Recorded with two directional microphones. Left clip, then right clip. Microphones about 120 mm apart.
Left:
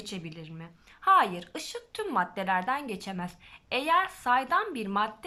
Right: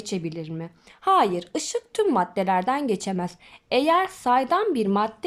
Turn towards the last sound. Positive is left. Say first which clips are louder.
# right 7 dB
turn(degrees=-45)  # may be behind; listen again after turning